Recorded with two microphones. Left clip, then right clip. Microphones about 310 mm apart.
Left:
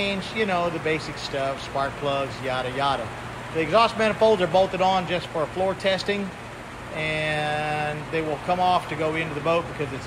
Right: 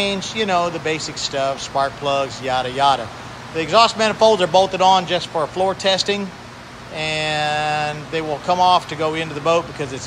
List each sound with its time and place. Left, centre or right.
0.0 s a man's voice: centre